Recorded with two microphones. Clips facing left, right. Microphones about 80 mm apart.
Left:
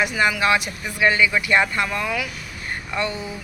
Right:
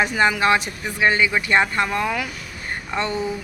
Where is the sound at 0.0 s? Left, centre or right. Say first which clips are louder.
Right 2 dB; right.